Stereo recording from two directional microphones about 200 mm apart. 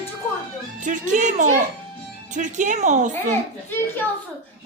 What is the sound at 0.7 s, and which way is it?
A woman's voice, 40° right (ahead or behind).